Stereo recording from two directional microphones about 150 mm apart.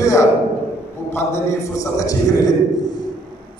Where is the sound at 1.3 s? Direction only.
20° left (ahead or behind).